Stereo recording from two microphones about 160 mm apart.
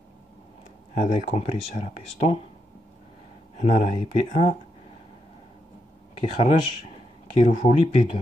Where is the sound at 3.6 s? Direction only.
45° left (ahead or behind).